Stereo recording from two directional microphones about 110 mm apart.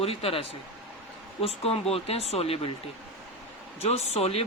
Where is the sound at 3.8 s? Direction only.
75° left (ahead or behind).